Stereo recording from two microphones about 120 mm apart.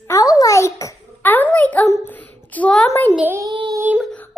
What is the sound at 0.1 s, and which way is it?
Babbling, 30° left (ahead or behind).